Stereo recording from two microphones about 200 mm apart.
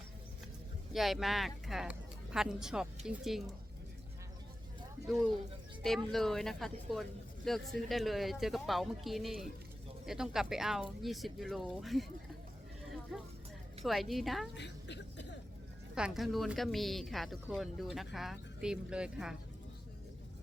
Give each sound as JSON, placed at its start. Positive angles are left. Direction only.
{"t": 0.9, "sound": "speech", "side_deg": 0}
{"t": 5.8, "sound": "speech", "side_deg": 0}
{"t": 13.8, "sound": "speech", "side_deg": 0}
{"t": 14.5, "sound": "a sound", "side_deg": 60}
{"t": 16.0, "sound": "speech", "side_deg": -5}